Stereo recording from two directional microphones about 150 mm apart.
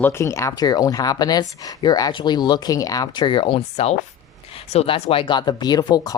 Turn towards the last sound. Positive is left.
turn(degrees=25)  # may be behind; listen again after turning